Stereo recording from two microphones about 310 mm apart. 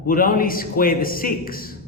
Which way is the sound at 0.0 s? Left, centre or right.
Left.